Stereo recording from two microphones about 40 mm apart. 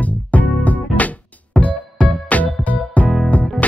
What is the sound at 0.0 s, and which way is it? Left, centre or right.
Music, left.